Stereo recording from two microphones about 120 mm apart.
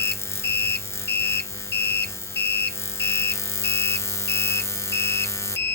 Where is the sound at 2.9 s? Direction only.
20° left (ahead or behind).